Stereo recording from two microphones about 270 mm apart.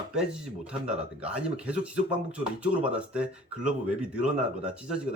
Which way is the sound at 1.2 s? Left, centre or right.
Centre.